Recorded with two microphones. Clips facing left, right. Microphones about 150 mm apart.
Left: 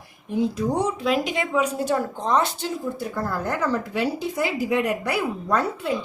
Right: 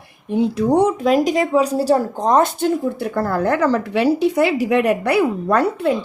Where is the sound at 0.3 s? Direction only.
70° right (ahead or behind).